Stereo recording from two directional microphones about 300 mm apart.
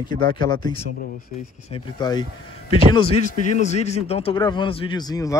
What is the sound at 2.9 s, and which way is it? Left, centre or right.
A man's voice, centre.